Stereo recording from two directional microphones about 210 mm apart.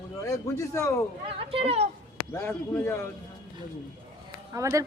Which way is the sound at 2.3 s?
10° left (ahead or behind).